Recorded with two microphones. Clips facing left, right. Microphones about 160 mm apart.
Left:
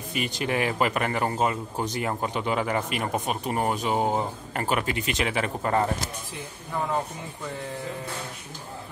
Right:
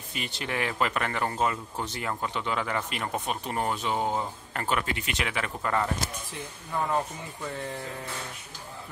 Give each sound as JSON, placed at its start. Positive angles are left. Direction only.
{"t": 0.1, "sound": "speech", "side_deg": 15}
{"t": 4.9, "sound": "speech", "side_deg": 30}